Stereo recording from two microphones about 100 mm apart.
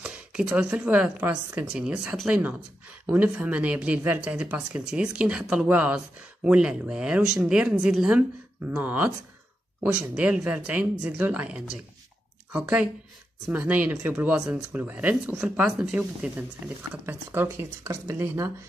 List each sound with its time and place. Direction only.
0.0 s speech: 10° right (ahead or behind)
8.6 s speech: 15° right (ahead or behind)